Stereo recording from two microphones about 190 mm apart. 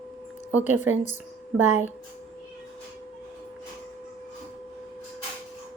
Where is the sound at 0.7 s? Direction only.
10° right (ahead or behind).